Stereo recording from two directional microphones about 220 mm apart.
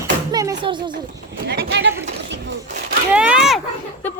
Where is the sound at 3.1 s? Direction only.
5° right (ahead or behind).